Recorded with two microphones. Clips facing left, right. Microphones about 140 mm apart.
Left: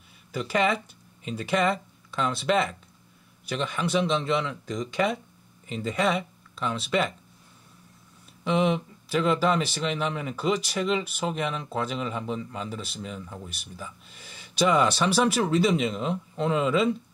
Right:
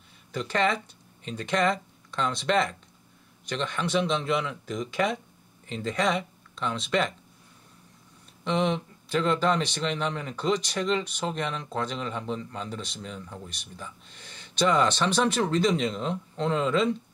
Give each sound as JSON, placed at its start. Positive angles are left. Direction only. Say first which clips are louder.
{"t": 0.3, "sound": "speech", "louder": "left 1 dB", "side_deg": 5}
{"t": 8.5, "sound": "speech", "louder": "left 2 dB", "side_deg": 5}